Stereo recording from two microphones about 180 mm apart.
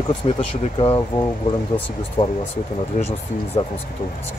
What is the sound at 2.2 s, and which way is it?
Speech, 25° left (ahead or behind).